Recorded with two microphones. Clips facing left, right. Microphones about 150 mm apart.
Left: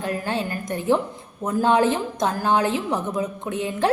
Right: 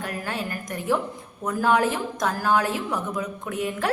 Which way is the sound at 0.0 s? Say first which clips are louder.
Left 5 dB; 25° left (ahead or behind).